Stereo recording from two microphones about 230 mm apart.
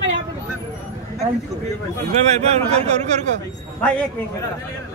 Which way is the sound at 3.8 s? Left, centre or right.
Centre.